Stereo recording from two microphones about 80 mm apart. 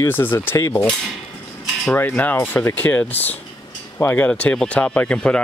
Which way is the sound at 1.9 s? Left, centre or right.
Left.